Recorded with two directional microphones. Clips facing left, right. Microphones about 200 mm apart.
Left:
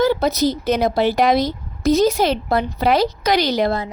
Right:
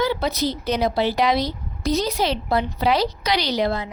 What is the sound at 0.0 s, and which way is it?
Speech, 45° left (ahead or behind).